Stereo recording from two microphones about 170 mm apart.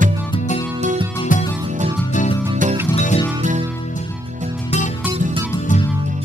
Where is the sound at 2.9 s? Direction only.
40° left (ahead or behind).